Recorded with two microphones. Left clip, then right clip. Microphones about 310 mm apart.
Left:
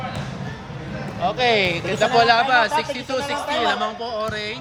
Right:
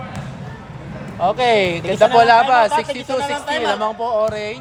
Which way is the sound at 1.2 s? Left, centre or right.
Right.